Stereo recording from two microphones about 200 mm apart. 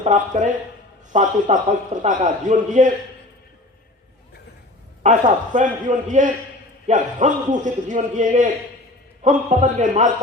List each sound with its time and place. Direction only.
0.0 s a man's voice: 35° right (ahead or behind)
5.0 s a man's voice: 40° right (ahead or behind)